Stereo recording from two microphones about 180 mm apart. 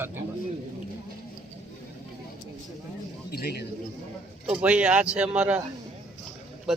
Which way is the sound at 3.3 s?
60° left (ahead or behind).